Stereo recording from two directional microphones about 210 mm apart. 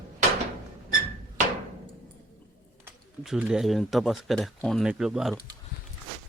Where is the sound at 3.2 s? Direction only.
Centre (ahead or behind).